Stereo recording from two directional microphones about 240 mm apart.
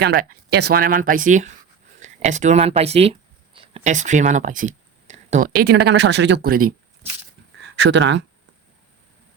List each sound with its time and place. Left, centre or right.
0.0 s speech: right
7.8 s speech: right